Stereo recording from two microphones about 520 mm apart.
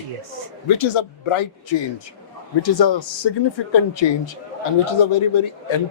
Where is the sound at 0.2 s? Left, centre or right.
Right.